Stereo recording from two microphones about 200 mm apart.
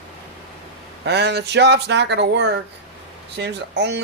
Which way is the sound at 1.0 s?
55° right (ahead or behind).